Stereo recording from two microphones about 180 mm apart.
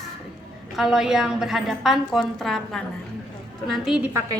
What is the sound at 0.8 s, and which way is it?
A woman's voice, 5° right (ahead or behind).